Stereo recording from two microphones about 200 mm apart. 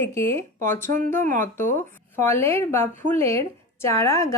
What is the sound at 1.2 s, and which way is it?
Speech, 40° right (ahead or behind).